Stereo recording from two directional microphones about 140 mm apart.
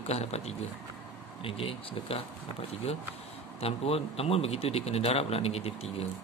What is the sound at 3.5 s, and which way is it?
Speech, 45° left (ahead or behind).